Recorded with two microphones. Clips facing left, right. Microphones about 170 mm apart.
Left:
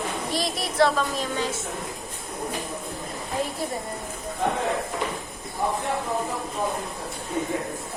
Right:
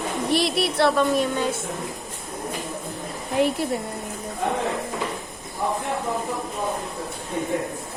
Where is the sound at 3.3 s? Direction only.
70° right (ahead or behind).